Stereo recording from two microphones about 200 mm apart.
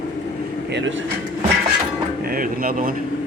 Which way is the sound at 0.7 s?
70° right (ahead or behind).